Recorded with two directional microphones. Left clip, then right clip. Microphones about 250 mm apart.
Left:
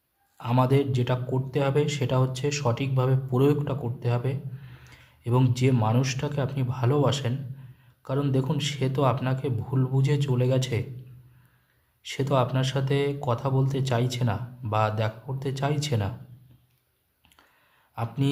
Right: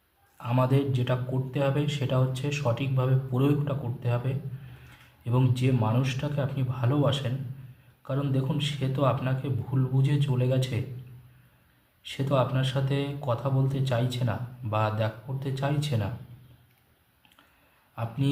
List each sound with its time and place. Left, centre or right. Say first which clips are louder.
0.3 s speech: left 3 dB; left
12.0 s speech: left 2 dB; left
17.9 s speech: left 3 dB; left